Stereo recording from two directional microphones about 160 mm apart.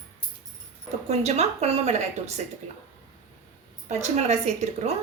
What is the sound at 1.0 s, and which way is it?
A woman's voice, 40° right (ahead or behind).